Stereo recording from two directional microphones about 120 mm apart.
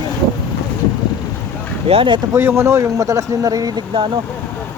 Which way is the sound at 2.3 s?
20° right (ahead or behind).